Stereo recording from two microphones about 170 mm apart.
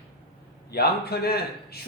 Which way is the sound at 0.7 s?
65° left (ahead or behind).